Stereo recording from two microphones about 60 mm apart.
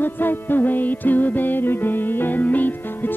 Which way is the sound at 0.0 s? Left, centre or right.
Left.